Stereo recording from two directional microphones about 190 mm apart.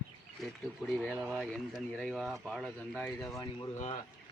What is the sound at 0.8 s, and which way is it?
Speech, 5° left (ahead or behind).